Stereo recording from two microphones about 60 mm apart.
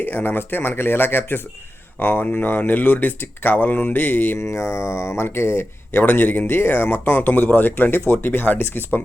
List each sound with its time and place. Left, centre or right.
0.0 s speech: left
4.4 s speech: left